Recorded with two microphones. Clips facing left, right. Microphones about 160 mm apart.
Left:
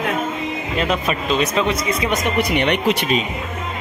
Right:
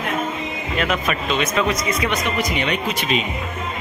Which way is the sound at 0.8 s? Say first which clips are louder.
Left 1 dB; 30° left (ahead or behind).